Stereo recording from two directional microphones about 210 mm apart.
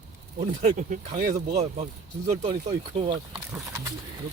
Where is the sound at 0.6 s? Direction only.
35° right (ahead or behind).